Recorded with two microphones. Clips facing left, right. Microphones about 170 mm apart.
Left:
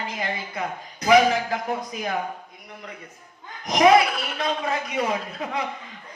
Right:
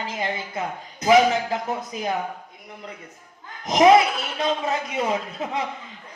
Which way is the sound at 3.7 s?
25° right (ahead or behind).